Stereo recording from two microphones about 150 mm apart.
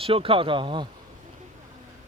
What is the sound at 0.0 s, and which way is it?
Speech, 35° right (ahead or behind).